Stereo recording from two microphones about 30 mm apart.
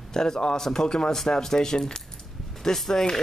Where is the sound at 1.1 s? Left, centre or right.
Centre.